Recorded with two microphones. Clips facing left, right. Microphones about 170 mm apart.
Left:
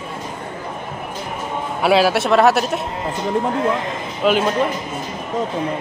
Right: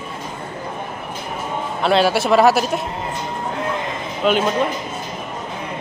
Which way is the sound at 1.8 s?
5° left (ahead or behind).